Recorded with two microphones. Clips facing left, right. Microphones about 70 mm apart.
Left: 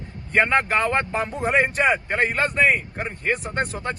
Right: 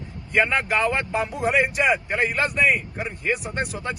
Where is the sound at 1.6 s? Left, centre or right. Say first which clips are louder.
Left 1 dB; left.